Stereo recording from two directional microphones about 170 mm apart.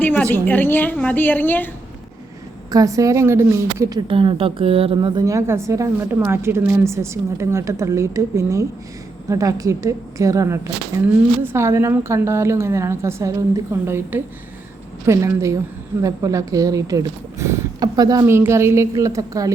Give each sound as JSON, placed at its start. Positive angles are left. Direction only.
{"t": 0.0, "sound": "a woman's voice", "side_deg": 10}
{"t": 2.6, "sound": "a woman's voice", "side_deg": -20}